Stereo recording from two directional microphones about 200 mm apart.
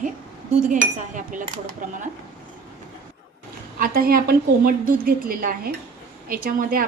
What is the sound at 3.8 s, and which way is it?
A woman's voice, 45° right (ahead or behind).